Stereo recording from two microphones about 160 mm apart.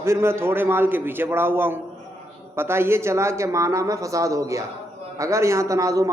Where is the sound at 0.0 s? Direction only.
15° right (ahead or behind).